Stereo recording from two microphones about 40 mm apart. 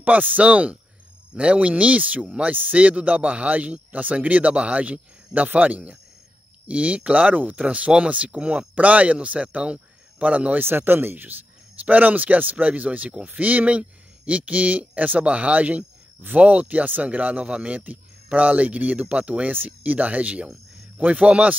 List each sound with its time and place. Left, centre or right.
0.0 s speech: right
10.6 s speech: right
11.8 s speech: right
19.5 s speech: right